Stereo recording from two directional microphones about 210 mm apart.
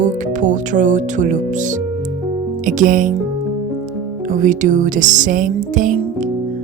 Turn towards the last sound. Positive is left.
turn(degrees=-40)  # may be behind; listen again after turning